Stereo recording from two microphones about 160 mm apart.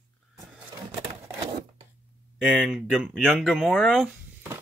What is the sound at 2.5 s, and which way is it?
Speech, centre (ahead or behind).